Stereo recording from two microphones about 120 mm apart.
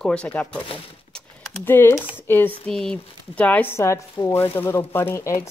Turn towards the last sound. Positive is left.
turn(degrees=20)  # may be behind; listen again after turning